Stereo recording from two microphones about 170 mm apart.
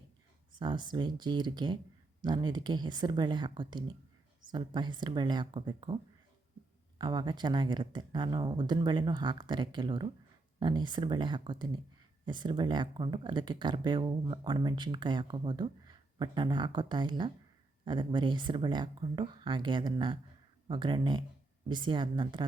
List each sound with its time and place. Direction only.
0.6 s speech: 25° right (ahead or behind)
7.0 s speech: 25° right (ahead or behind)